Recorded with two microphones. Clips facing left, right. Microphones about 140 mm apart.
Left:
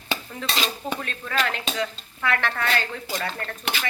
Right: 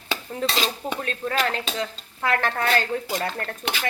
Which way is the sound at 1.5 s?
35° right (ahead or behind).